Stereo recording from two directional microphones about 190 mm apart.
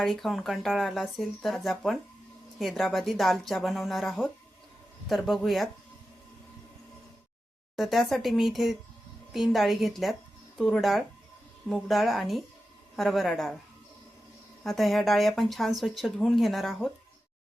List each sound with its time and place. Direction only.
0.0 s speech: centre (ahead or behind)
7.8 s speech: centre (ahead or behind)
14.6 s speech: centre (ahead or behind)